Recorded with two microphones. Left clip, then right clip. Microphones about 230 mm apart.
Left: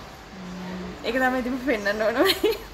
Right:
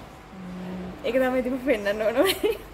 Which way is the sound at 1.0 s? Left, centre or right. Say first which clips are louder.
Even; centre.